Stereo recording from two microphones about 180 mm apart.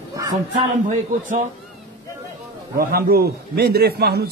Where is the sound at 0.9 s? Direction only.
45° right (ahead or behind).